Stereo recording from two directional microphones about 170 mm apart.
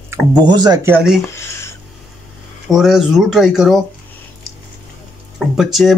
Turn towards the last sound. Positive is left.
turn(degrees=0)  # may be behind; listen again after turning